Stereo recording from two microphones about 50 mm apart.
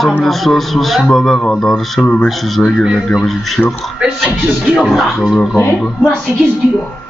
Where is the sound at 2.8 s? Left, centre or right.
Centre.